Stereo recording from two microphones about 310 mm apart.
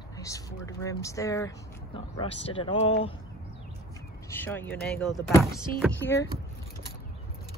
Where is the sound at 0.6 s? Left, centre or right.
Centre.